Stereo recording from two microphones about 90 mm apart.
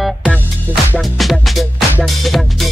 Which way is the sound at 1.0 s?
Centre (ahead or behind).